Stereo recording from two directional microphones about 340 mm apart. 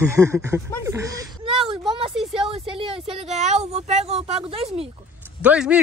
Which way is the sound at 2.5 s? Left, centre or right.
Centre.